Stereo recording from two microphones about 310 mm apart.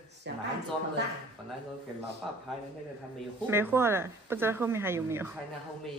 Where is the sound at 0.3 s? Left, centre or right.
Right.